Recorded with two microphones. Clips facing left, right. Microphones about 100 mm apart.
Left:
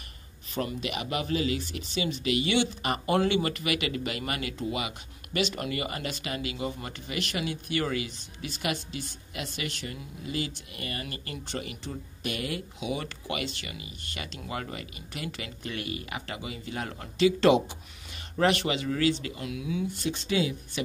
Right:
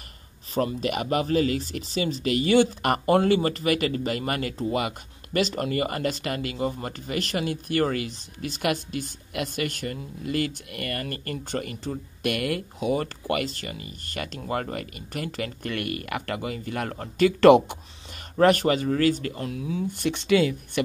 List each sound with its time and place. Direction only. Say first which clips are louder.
0.6 s speech: right 6 dB; 35° right (ahead or behind)
3.1 s speech: right 5 dB; 35° right (ahead or behind)
12.2 s speech: right 7 dB; 60° right (ahead or behind)
18.4 s speech: right 6 dB; 45° right (ahead or behind)
19.9 s speech: right 7 dB; 65° right (ahead or behind)